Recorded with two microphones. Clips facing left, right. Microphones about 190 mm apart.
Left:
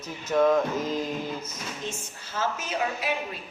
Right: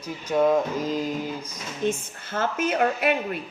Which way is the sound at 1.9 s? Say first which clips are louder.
Right 9 dB; 55° right (ahead or behind).